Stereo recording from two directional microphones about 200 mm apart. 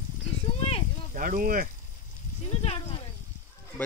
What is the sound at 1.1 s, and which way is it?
Speech, 45° right (ahead or behind).